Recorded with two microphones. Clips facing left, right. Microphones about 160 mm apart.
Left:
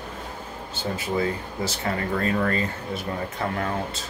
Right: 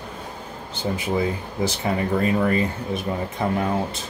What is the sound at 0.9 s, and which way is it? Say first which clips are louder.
Speech: right 2 dB; 15° right (ahead or behind).